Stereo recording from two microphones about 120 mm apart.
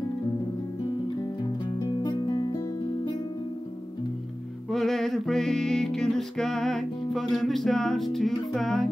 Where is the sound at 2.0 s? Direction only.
40° left (ahead or behind).